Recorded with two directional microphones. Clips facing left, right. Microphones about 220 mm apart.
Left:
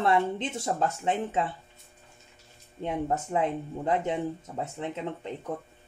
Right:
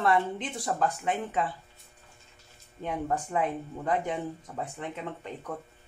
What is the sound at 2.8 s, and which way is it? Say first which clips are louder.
A woman's voice: left 2 dB; 25° left (ahead or behind).